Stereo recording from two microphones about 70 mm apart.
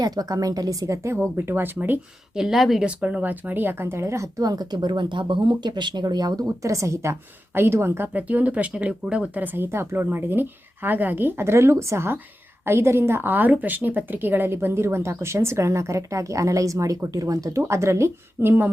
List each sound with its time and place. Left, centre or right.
0.0 s a woman's voice: right
2.3 s speech: centre
2.8 s speech: centre; by 4.3 s right
4.4 s speech: right